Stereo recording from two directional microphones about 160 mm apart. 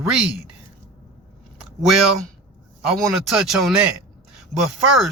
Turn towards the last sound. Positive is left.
turn(degrees=0)  # may be behind; listen again after turning